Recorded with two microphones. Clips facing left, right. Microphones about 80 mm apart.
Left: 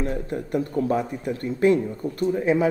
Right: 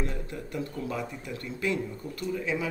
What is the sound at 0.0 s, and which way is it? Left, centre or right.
Speech, left.